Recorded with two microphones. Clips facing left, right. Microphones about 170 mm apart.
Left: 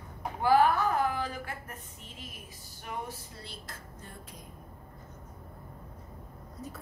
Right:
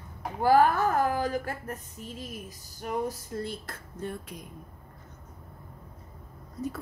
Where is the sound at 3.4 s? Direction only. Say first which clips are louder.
Right 11 dB; 55° right (ahead or behind).